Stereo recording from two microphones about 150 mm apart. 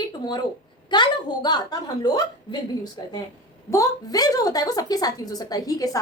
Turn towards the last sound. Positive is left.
turn(degrees=25)  # may be behind; listen again after turning